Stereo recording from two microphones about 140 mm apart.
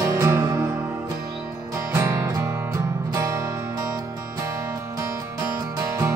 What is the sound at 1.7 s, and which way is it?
Music, 20° right (ahead or behind).